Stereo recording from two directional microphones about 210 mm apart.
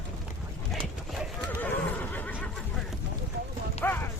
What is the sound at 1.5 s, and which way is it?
Neigh, 10° left (ahead or behind).